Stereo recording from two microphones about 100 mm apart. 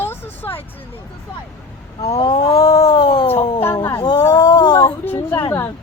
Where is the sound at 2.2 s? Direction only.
50° left (ahead or behind).